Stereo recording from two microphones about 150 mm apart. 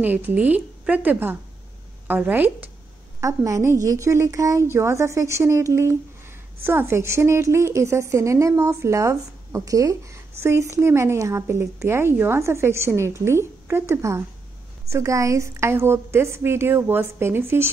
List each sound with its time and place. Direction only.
0.0 s a woman's voice: 10° right (ahead or behind)